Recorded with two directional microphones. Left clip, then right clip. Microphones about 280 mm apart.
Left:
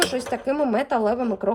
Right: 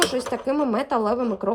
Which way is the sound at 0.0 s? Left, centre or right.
Centre.